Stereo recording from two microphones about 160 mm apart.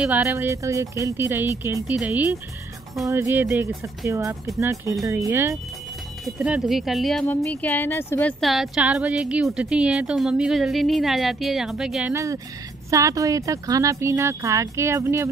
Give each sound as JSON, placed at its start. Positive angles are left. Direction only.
{"t": 0.0, "sound": "speech", "side_deg": -10}
{"t": 6.2, "sound": "speech", "side_deg": -5}
{"t": 12.1, "sound": "speech", "side_deg": -20}